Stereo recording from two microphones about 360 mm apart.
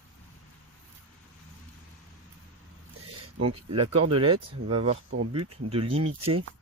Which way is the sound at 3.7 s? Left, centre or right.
Centre.